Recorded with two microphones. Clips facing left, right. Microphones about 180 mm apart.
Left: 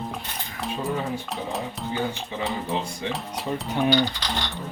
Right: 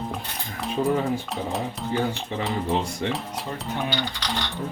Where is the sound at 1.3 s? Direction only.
Centre (ahead or behind).